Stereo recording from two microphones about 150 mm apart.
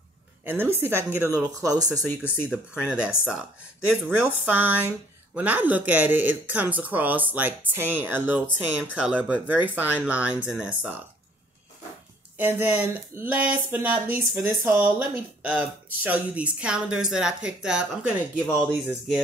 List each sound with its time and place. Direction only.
0.4 s speech: 15° right (ahead or behind)
2.4 s speech: 5° right (ahead or behind)
12.4 s speech: 10° right (ahead or behind)